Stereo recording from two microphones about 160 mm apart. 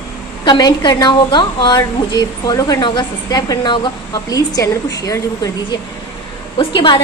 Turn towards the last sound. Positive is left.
turn(degrees=30)  # may be behind; listen again after turning